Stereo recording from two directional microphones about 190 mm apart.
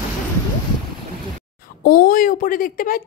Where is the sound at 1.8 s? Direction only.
45° left (ahead or behind).